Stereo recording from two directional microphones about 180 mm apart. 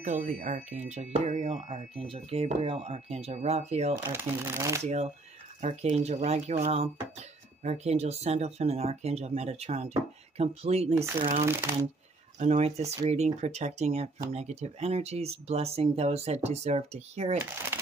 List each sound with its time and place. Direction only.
0.0 s speech: 45° right (ahead or behind)
4.1 s speech: 10° right (ahead or behind)
4.8 s speech: 40° right (ahead or behind)
11.4 s speech: 15° right (ahead or behind)
12.4 s speech: 35° right (ahead or behind)